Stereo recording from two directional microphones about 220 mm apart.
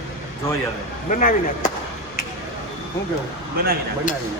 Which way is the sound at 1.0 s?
35° left (ahead or behind).